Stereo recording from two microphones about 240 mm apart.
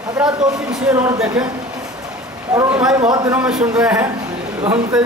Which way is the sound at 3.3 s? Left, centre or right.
Centre.